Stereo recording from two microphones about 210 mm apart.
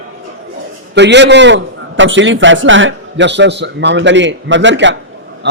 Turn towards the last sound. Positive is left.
turn(degrees=-60)  # may be behind; listen again after turning